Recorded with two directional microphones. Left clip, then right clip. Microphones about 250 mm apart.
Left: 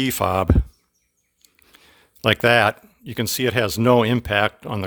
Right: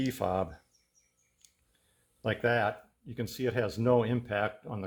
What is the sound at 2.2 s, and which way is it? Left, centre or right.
Speech, left.